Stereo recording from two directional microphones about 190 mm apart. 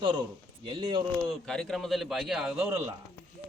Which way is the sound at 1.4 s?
Centre (ahead or behind).